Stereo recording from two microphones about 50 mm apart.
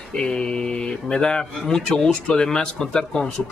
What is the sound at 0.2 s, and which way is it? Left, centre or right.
Speech, centre.